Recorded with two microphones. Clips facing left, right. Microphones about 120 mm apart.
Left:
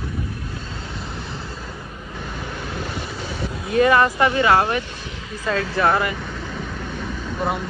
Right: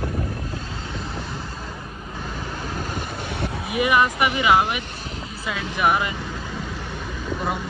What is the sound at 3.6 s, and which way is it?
Speech, 15° right (ahead or behind).